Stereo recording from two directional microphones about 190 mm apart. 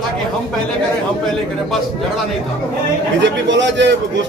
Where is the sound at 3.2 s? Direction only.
70° right (ahead or behind).